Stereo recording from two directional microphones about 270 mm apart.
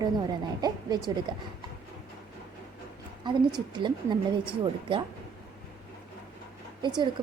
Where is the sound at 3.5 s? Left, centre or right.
Centre.